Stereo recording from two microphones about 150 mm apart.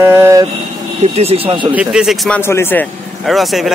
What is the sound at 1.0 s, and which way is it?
Speech, 45° right (ahead or behind).